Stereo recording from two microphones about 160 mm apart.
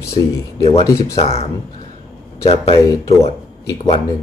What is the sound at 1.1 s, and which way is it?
Speech, 40° left (ahead or behind).